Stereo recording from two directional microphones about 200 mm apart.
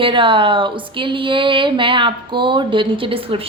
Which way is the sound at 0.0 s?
25° right (ahead or behind).